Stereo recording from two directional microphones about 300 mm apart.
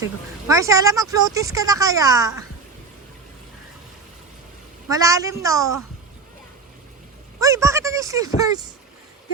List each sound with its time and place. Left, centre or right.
0.4 s speech: centre
4.9 s speech: centre
7.3 s speech: centre